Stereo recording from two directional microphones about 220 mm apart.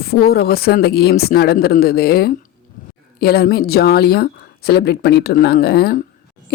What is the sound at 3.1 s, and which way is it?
A woman's voice, 45° left (ahead or behind).